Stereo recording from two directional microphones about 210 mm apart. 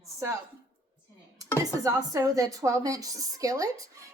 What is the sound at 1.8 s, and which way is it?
A woman's voice, 15° right (ahead or behind).